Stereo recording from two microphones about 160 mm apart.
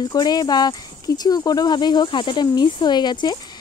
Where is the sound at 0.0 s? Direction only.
25° left (ahead or behind).